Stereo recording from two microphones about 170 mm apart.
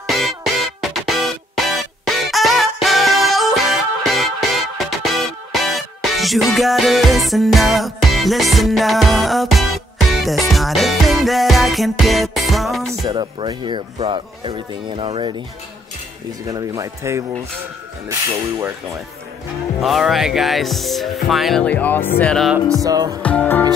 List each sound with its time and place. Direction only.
0.1 s music: centre (ahead or behind)
13.0 s speech: 30° right (ahead or behind)
16.4 s speech: 20° right (ahead or behind)
19.8 s music: centre (ahead or behind)
21.3 s speech: centre (ahead or behind)
22.2 s music: centre (ahead or behind)
22.8 s speech: 20° right (ahead or behind)
23.2 s speech: 10° left (ahead or behind)